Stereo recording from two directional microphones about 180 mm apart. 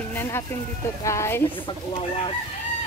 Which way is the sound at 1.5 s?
30° left (ahead or behind).